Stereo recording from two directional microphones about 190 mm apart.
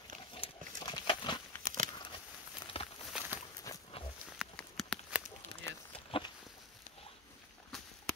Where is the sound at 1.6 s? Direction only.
45° right (ahead or behind).